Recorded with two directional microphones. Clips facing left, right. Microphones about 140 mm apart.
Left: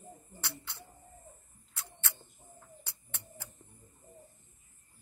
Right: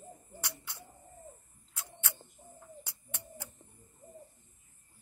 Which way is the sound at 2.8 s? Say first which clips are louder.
Right 3 dB; 10° right (ahead or behind).